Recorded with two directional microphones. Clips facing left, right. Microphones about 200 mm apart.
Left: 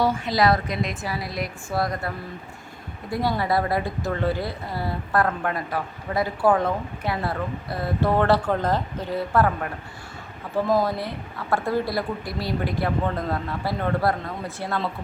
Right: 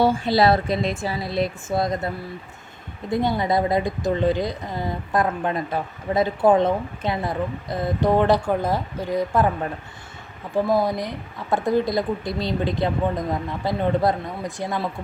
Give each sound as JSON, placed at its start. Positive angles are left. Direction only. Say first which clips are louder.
{"t": 0.0, "sound": "a woman's voice", "louder": "right 3 dB", "side_deg": -30}